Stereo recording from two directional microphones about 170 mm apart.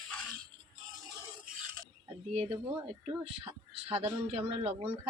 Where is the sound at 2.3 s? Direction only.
40° right (ahead or behind).